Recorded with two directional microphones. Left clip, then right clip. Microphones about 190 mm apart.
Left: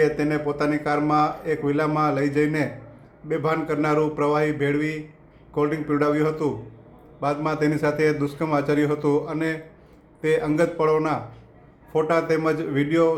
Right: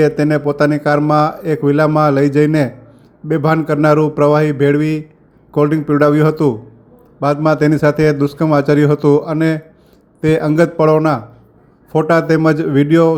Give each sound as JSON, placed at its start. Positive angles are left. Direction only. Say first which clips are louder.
{"t": 0.0, "sound": "a man's voice", "louder": "right 8 dB", "side_deg": -35}